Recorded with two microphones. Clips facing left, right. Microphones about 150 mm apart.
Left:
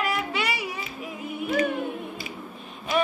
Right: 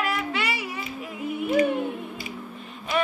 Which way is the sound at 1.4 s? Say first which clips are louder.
Right 3 dB; 20° right (ahead or behind).